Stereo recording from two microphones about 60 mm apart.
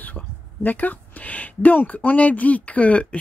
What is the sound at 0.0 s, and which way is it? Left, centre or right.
Speech, left.